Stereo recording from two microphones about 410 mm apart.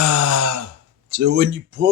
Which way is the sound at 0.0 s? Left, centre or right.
Right.